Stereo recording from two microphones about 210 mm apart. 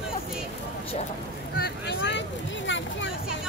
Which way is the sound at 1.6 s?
55° left (ahead or behind).